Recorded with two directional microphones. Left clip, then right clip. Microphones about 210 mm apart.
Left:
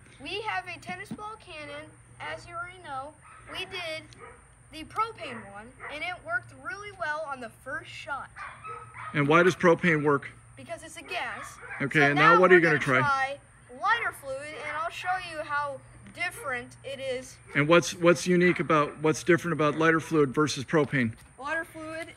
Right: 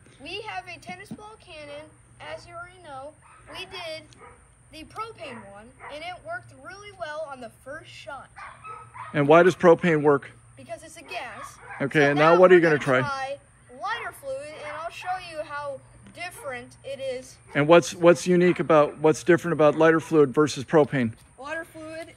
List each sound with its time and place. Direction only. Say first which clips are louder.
0.2 s a woman's voice: left 2 dB; 5° left (ahead or behind)
8.5 s bow-wow: even; 40° right (ahead or behind)
9.3 s a woman's voice: right 5 dB; centre (ahead or behind)